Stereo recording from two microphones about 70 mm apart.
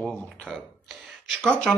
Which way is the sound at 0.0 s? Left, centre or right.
Centre.